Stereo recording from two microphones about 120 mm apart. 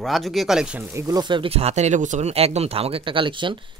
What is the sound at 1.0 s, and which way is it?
Speech, 30° right (ahead or behind).